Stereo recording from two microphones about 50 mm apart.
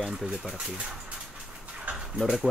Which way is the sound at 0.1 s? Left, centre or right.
Centre.